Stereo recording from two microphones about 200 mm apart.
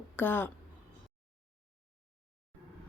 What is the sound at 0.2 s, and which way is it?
Speech, 10° left (ahead or behind).